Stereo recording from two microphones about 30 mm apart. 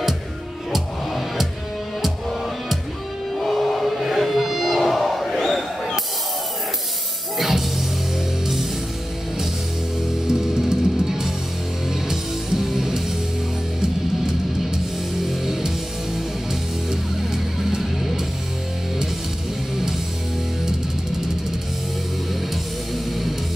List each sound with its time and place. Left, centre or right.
0.7 s music: centre
3.3 s music: centre
7.3 s music: centre
10.2 s music: centre
15.2 s music: centre
16.9 s music: centre